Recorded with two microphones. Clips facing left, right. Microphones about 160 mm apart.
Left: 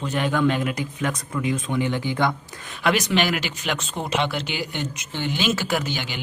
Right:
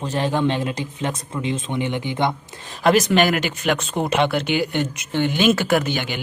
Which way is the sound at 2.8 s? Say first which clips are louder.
Right 5 dB; 45° right (ahead or behind).